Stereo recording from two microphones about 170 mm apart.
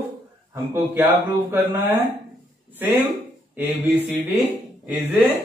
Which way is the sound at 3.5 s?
10° right (ahead or behind).